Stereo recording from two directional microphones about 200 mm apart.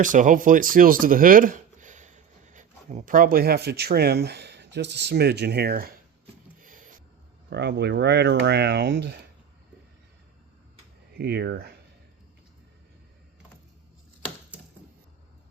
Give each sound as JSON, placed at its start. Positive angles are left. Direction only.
{"t": 0.0, "sound": "speech", "side_deg": -40}
{"t": 6.6, "sound": "a sound", "side_deg": -45}
{"t": 7.5, "sound": "speech", "side_deg": -55}
{"t": 11.2, "sound": "speech", "side_deg": -55}